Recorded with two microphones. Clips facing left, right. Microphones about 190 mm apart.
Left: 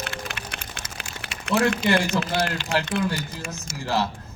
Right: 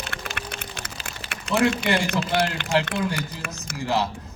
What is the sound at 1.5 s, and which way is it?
Speech, 60° left (ahead or behind).